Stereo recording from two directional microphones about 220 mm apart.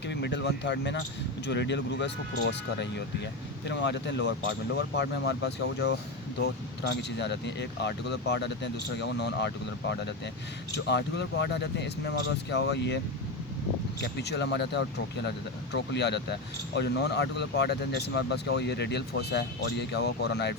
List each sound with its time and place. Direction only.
0.1 s speech: 50° left (ahead or behind)
7.2 s speech: 50° left (ahead or behind)
10.8 s speech: 50° left (ahead or behind)
14.0 s speech: 50° left (ahead or behind)